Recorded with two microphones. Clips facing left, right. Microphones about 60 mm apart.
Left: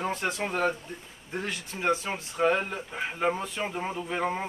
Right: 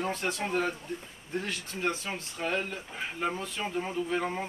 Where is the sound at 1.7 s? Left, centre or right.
Left.